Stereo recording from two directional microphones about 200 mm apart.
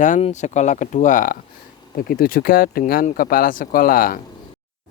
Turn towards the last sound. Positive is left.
turn(degrees=45)  # may be behind; listen again after turning